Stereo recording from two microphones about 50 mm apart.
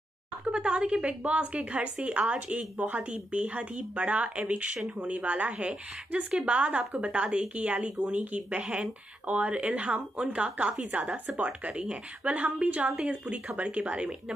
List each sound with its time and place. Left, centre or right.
0.5 s a woman's voice: right
12.9 s a woman's voice: centre